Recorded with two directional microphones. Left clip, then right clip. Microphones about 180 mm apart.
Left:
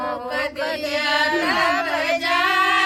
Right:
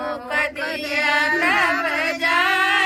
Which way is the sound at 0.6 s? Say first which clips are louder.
Right 1 dB; 30° left (ahead or behind).